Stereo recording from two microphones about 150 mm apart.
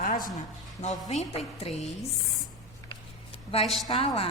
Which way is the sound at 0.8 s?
50° left (ahead or behind).